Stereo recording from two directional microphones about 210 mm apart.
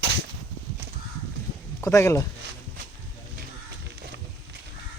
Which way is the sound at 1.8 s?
15° left (ahead or behind).